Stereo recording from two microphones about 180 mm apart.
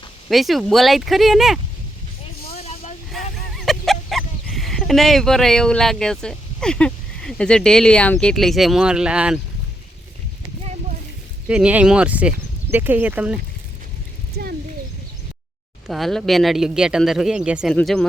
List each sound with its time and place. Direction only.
0.3 s speech: centre (ahead or behind)
2.5 s vehicle: 35° left (ahead or behind)
3.1 s speech: centre (ahead or behind)
11.4 s speech: 5° right (ahead or behind)
15.9 s speech: centre (ahead or behind)